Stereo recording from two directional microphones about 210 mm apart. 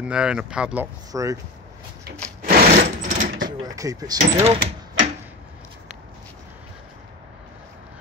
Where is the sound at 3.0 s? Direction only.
40° right (ahead or behind).